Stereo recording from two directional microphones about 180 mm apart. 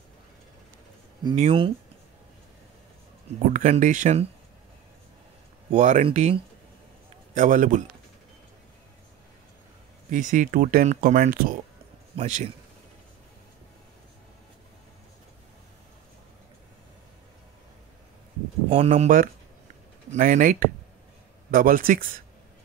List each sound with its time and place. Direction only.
1.3 s speech: 35° right (ahead or behind)
3.5 s speech: 45° right (ahead or behind)
5.7 s speech: 40° right (ahead or behind)
7.3 s speech: 45° right (ahead or behind)
10.0 s speech: 45° right (ahead or behind)
12.2 s speech: 40° right (ahead or behind)
18.7 s speech: 35° right (ahead or behind)
19.0 s speech: 50° right (ahead or behind)